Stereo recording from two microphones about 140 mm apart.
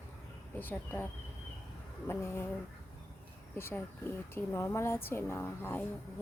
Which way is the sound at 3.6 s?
15° left (ahead or behind).